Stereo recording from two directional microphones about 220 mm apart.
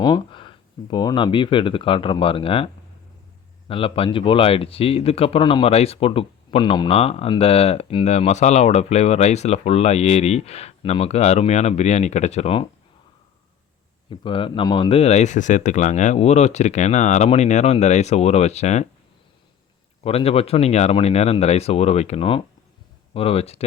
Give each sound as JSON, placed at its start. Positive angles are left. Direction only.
{"t": 0.0, "sound": "speech", "side_deg": 20}
{"t": 3.7, "sound": "speech", "side_deg": 25}
{"t": 14.1, "sound": "speech", "side_deg": 20}
{"t": 20.0, "sound": "speech", "side_deg": 25}